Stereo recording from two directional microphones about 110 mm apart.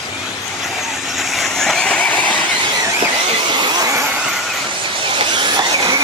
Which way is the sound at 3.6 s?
35° right (ahead or behind).